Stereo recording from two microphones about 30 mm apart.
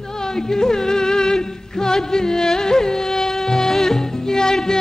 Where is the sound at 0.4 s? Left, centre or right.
Centre.